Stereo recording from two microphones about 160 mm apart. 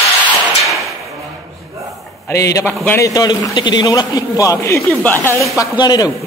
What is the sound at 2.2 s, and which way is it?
A man's voice, 20° left (ahead or behind).